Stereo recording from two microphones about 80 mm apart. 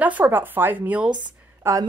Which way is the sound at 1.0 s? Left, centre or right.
Right.